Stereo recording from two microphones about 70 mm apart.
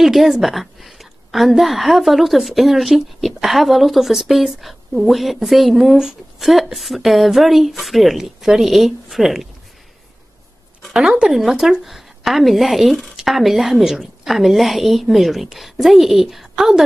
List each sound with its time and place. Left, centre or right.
0.0 s a woman's voice: centre
10.8 s a sound: centre
11.2 s a woman's voice: centre